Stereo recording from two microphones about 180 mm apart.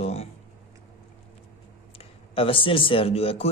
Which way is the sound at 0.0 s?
35° left (ahead or behind).